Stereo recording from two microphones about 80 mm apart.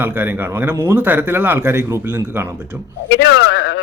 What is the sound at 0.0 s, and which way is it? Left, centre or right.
A man's voice, right.